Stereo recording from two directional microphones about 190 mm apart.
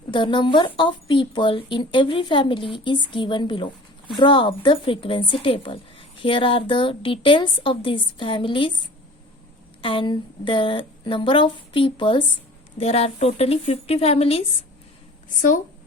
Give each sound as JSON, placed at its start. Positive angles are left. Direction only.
{"t": 0.1, "sound": "speech", "side_deg": 25}
{"t": 9.8, "sound": "a woman's voice", "side_deg": 25}
{"t": 15.4, "sound": "speech", "side_deg": 45}